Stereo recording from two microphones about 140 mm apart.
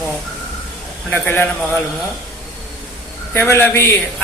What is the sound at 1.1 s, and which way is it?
Speech, 15° left (ahead or behind).